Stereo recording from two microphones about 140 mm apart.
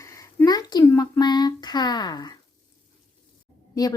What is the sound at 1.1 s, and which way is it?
Speech, 30° left (ahead or behind).